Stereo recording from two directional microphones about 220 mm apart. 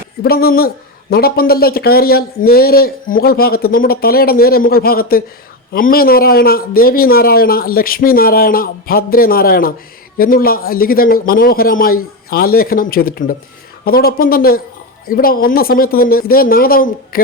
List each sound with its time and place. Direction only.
0.2 s a man's voice: 45° left (ahead or behind)